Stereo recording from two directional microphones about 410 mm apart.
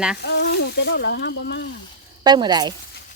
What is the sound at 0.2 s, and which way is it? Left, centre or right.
Speech, left.